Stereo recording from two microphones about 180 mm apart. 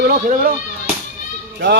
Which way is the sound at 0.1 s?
50° right (ahead or behind).